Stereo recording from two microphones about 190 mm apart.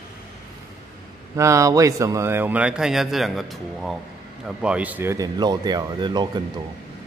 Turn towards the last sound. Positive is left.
turn(degrees=-25)  # may be behind; listen again after turning